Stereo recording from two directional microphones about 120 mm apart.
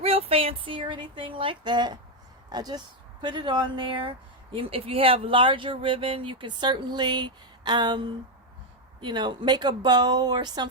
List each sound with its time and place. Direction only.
0.0 s speech: 55° right (ahead or behind); by 10.7 s 35° right (ahead or behind)